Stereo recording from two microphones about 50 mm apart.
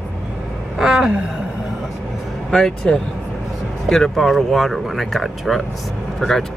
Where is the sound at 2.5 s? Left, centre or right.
Centre.